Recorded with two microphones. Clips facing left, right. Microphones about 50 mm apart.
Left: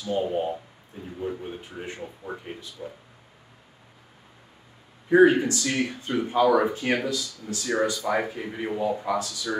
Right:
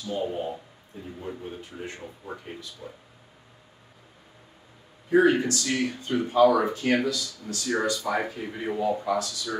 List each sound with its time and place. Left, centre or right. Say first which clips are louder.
0.0 s speech: left 3 dB; left
1.8 s speech: left 1 dB; left
2.8 s speech: left 7 dB; centre
5.1 s speech: left 3 dB; left